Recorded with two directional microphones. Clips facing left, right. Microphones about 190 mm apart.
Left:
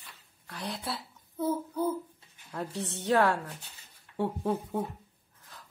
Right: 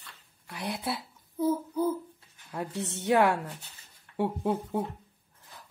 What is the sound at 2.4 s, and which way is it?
Speech, 15° right (ahead or behind).